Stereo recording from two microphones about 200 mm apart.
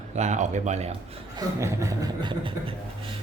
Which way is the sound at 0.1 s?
35° right (ahead or behind).